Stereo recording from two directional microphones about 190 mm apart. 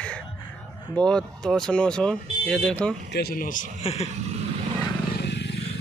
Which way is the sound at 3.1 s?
55° left (ahead or behind).